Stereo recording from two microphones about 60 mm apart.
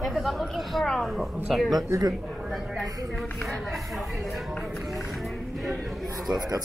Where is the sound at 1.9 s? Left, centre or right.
Right.